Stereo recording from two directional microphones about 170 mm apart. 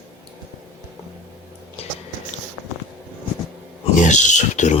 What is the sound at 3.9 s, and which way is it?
Speech, 45° left (ahead or behind).